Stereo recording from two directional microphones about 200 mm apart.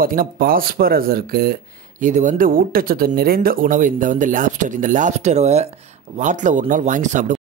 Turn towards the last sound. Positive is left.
turn(degrees=-35)  # may be behind; listen again after turning